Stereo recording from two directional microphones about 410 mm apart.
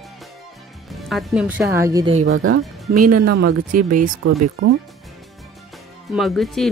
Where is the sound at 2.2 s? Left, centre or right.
Right.